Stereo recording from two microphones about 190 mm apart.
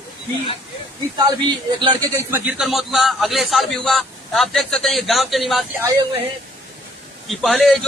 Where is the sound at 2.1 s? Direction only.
10° right (ahead or behind).